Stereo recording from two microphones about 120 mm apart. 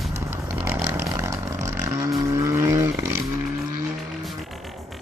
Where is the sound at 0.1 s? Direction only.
20° right (ahead or behind).